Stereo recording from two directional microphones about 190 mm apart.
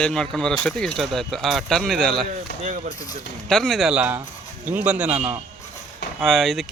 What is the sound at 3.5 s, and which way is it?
A man's voice, centre (ahead or behind).